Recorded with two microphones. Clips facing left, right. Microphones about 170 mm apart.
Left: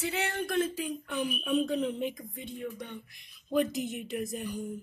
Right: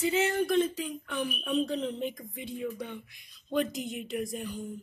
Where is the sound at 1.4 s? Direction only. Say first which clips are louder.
Left 1 dB; 10° left (ahead or behind).